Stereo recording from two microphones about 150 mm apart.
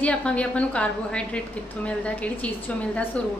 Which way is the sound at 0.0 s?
5° left (ahead or behind).